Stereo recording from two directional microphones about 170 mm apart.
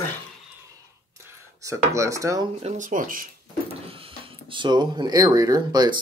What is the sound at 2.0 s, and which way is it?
Speech, 20° right (ahead or behind).